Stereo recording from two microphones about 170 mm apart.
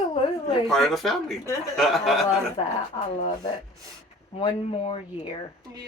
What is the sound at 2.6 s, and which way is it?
Speech, 35° left (ahead or behind).